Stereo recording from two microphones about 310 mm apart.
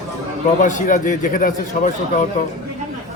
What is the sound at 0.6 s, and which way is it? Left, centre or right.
A man's voice, left.